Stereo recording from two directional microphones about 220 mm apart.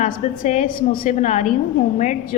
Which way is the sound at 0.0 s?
35° left (ahead or behind).